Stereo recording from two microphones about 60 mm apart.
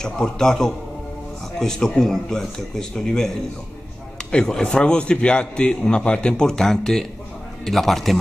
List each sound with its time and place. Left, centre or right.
0.0 s a man's voice: centre
4.3 s a man's voice: centre